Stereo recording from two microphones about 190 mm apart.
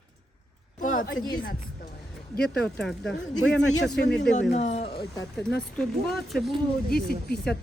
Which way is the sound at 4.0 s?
60° left (ahead or behind).